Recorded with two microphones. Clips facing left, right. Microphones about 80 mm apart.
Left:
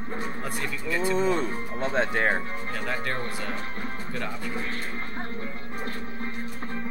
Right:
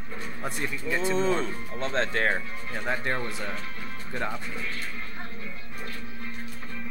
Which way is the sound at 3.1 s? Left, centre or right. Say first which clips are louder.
Left 1 dB; left.